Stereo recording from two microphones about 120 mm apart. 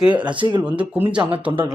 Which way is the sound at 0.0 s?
10° right (ahead or behind).